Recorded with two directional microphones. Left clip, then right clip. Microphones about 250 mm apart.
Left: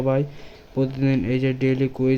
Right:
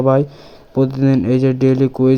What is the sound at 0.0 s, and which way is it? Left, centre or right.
Speech, centre.